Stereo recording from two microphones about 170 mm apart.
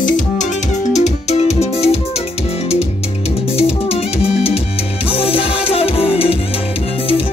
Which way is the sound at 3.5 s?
35° left (ahead or behind).